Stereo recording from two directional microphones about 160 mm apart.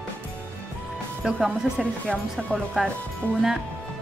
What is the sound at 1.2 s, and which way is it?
A woman's voice, 5° right (ahead or behind).